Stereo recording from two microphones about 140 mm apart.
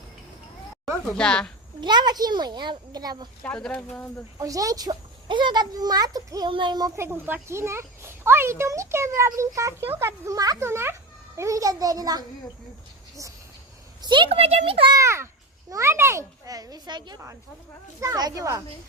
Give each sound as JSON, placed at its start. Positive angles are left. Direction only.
{"t": 1.1, "sound": "speech", "side_deg": 5}
{"t": 1.8, "sound": "a child's voice", "side_deg": -30}
{"t": 3.4, "sound": "speech", "side_deg": 10}
{"t": 4.4, "sound": "a child's voice", "side_deg": -25}
{"t": 14.0, "sound": "a child's voice", "side_deg": -35}
{"t": 14.9, "sound": "a child's voice", "side_deg": -20}